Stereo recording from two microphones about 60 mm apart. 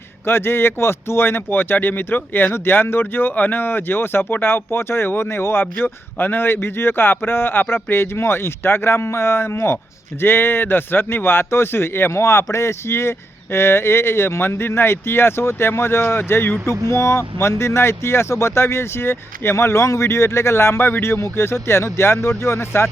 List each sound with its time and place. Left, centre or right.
0.3 s a man's voice: left